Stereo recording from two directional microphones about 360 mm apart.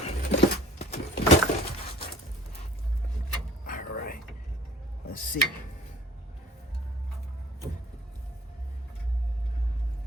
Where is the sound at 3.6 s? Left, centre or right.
Left.